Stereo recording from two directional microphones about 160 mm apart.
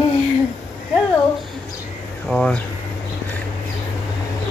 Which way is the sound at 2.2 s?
5° left (ahead or behind).